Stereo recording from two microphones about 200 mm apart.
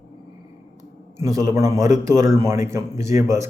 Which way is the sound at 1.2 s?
15° right (ahead or behind).